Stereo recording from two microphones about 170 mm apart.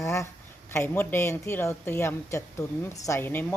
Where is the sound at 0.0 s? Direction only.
15° left (ahead or behind).